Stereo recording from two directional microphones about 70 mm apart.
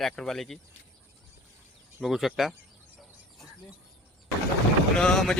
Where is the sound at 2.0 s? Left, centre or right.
Centre.